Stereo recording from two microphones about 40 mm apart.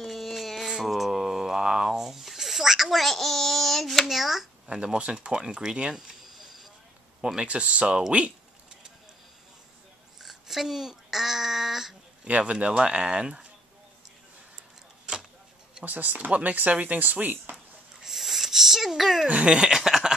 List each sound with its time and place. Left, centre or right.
0.0 s a sound: centre
3.0 s a child's voice: centre
4.1 s a child's voice: centre
4.6 s speech: right
6.3 s vehicle: centre
7.3 s speech: right
10.2 s a sound: centre
12.3 s speech: right
15.8 s speech: right
18.0 s a sound: centre
19.2 s speech: right
19.5 s a sound: centre